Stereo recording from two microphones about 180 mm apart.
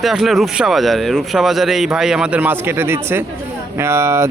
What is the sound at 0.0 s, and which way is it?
Speech, centre (ahead or behind).